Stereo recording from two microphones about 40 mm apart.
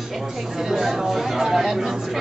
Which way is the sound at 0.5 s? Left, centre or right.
Centre.